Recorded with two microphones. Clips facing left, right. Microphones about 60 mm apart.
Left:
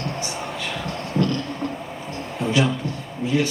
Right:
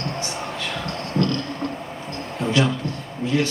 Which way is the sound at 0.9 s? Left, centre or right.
Centre.